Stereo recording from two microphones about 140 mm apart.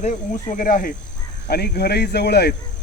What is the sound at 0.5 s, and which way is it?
Speech, 75° left (ahead or behind).